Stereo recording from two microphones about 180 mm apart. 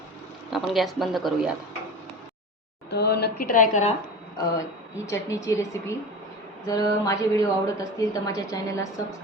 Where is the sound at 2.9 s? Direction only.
65° left (ahead or behind); by 3.9 s 45° left (ahead or behind).